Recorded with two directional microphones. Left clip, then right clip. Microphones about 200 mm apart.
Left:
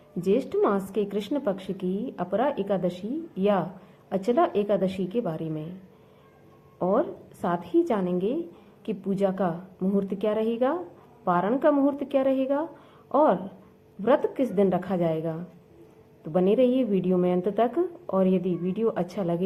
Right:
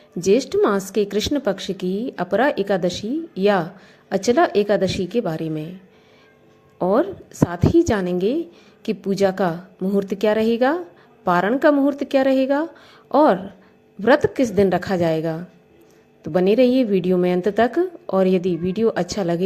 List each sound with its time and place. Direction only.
0.2 s a woman's voice: 35° right (ahead or behind)
6.7 s a woman's voice: 40° right (ahead or behind)